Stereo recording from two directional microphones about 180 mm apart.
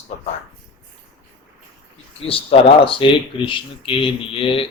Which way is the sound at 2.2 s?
30° left (ahead or behind).